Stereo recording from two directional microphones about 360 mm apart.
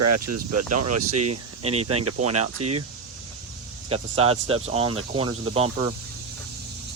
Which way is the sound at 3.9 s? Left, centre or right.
Centre.